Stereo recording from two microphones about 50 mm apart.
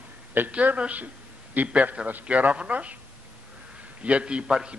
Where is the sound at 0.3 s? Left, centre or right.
Right.